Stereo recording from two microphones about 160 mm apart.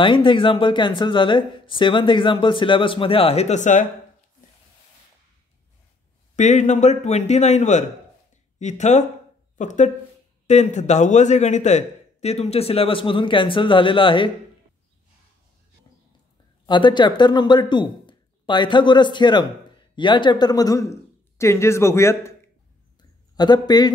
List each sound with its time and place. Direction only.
0.0 s a man's voice: 30° left (ahead or behind); by 3.8 s 50° left (ahead or behind)
6.3 s a man's voice: 50° left (ahead or behind); by 14.3 s 30° left (ahead or behind)
16.6 s speech: 30° left (ahead or behind)
23.3 s speech: 25° left (ahead or behind)